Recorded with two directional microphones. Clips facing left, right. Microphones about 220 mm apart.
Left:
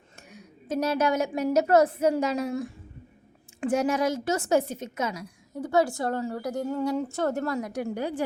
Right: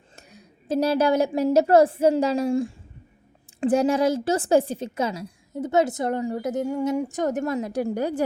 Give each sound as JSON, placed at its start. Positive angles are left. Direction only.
{"t": 0.2, "sound": "a woman's voice", "side_deg": -35}